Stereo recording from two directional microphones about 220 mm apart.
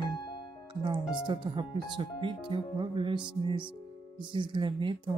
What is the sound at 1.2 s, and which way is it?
Speech, 20° right (ahead or behind).